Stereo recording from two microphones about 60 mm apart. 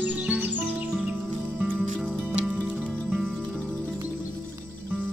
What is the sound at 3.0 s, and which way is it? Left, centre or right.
Music, centre.